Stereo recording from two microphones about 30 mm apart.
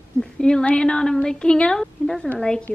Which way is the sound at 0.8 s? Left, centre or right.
Left.